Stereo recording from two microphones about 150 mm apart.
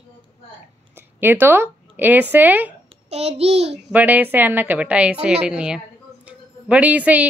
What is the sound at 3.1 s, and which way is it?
Speech, 45° right (ahead or behind).